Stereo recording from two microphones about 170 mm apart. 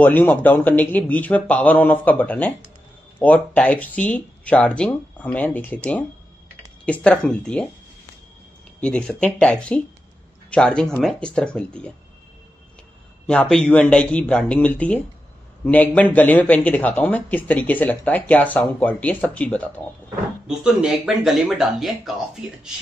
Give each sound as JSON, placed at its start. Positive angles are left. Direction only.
{"t": 0.0, "sound": "speech", "side_deg": 10}
{"t": 8.8, "sound": "speech", "side_deg": 5}
{"t": 13.3, "sound": "speech", "side_deg": 5}
{"t": 20.4, "sound": "speech", "side_deg": -5}